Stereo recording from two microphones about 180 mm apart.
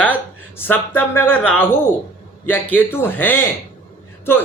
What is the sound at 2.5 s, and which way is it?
Speech, 10° left (ahead or behind).